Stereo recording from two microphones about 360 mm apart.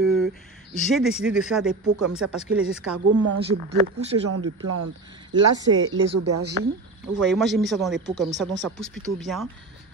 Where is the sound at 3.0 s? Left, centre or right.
Right.